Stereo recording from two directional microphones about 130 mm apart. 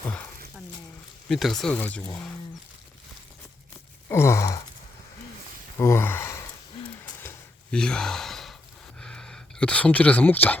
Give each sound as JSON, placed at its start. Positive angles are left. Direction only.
{"t": 1.3, "sound": "speech", "side_deg": 0}
{"t": 4.1, "sound": "wail", "side_deg": 20}
{"t": 5.7, "sound": "gasp", "side_deg": 20}
{"t": 7.0, "sound": "a sound", "side_deg": 20}
{"t": 7.7, "sound": "speech", "side_deg": 5}
{"t": 9.0, "sound": "a sound", "side_deg": 5}